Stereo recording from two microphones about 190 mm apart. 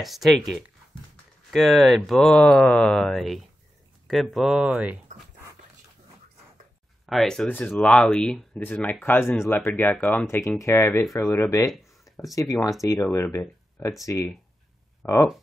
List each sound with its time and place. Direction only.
0.0 s speech: centre (ahead or behind)
7.1 s speech: centre (ahead or behind)